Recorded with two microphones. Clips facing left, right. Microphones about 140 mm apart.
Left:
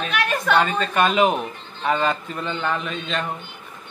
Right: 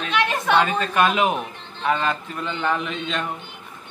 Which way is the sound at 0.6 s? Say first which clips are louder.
Right 1 dB; 5° right (ahead or behind).